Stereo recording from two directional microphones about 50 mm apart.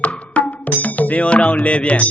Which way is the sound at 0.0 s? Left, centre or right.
Left.